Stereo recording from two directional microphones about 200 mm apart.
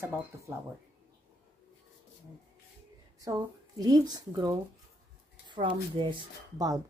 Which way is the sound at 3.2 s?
20° right (ahead or behind).